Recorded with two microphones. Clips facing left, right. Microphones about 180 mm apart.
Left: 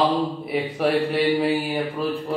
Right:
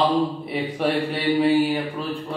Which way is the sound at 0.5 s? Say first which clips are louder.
Left 2 dB; centre (ahead or behind).